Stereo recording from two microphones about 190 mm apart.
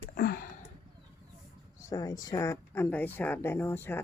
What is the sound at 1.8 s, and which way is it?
Speech, 20° left (ahead or behind).